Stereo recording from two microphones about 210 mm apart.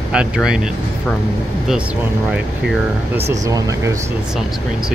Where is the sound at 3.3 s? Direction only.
15° right (ahead or behind).